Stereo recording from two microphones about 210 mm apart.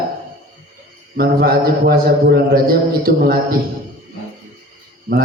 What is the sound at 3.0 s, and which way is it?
Speech, 45° right (ahead or behind).